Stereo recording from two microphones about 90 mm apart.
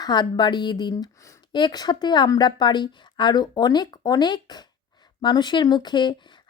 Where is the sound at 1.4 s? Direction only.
55° left (ahead or behind).